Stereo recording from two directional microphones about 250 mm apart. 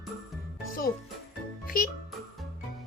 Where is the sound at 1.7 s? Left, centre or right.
Left.